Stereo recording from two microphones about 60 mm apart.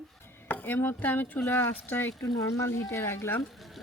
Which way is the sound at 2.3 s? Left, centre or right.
Left.